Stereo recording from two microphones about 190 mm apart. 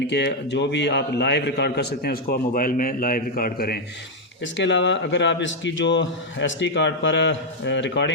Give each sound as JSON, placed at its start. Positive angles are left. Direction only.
{"t": 0.1, "sound": "a man's voice", "side_deg": 65}
{"t": 4.5, "sound": "a man's voice", "side_deg": 70}